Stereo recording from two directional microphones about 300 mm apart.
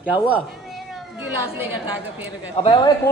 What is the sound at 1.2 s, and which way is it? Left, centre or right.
Speech, centre.